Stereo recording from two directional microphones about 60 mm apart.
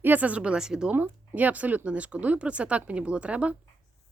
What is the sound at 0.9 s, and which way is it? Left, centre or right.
A woman's voice, right.